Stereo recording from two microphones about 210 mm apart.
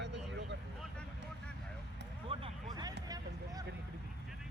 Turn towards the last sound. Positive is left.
turn(degrees=-15)  # may be behind; listen again after turning